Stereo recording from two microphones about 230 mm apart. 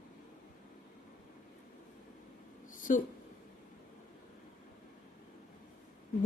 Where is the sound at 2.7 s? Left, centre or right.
Left.